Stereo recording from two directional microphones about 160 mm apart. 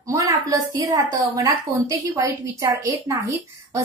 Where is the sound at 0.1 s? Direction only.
20° right (ahead or behind).